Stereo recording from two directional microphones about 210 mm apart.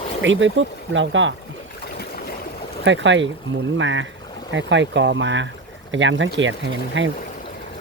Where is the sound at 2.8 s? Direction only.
60° right (ahead or behind).